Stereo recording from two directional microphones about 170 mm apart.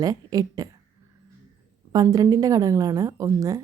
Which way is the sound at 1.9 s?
20° right (ahead or behind).